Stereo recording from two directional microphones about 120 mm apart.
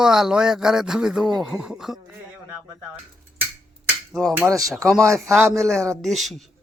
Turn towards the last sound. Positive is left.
turn(degrees=0)  # may be behind; listen again after turning